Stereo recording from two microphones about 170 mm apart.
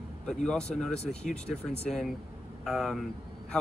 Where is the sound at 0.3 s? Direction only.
5° left (ahead or behind).